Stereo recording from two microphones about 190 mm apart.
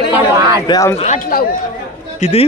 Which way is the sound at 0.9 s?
35° left (ahead or behind).